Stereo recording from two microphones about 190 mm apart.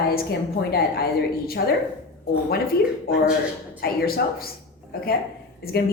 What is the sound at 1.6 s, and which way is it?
Speech, 55° left (ahead or behind).